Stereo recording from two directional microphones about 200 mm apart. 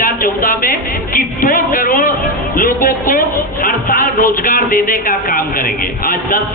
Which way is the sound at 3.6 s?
45° left (ahead or behind).